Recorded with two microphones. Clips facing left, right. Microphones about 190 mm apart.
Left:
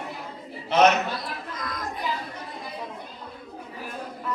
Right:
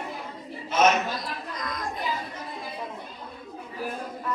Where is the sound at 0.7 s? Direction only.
65° left (ahead or behind).